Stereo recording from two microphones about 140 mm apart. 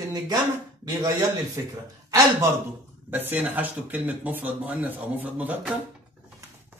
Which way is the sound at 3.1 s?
15° right (ahead or behind).